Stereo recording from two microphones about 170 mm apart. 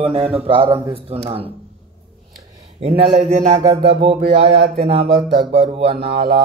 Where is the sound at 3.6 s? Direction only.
20° right (ahead or behind).